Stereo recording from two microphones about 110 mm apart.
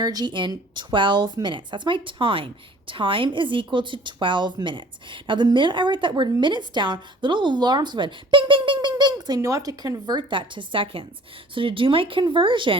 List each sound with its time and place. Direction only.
0.0 s speech: 35° right (ahead or behind)